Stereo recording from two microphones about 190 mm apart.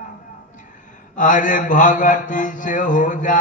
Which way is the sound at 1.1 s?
45° left (ahead or behind).